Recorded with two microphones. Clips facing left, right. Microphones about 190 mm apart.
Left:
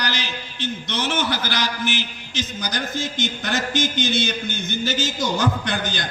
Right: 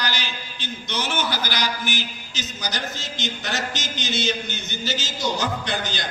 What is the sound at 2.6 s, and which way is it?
A man's voice, 50° left (ahead or behind).